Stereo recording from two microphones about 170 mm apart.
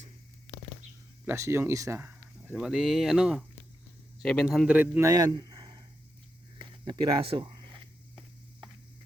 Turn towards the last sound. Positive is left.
turn(degrees=-30)  # may be behind; listen again after turning